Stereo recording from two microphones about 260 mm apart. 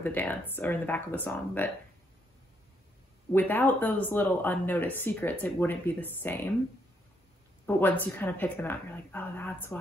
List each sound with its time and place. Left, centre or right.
0.0 s speech: centre
3.3 s speech: centre
7.6 s speech: centre